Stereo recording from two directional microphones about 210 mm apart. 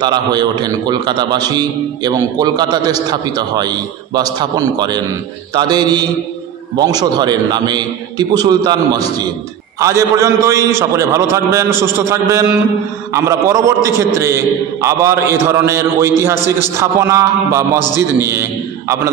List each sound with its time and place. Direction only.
0.0 s a man's voice: 20° right (ahead or behind)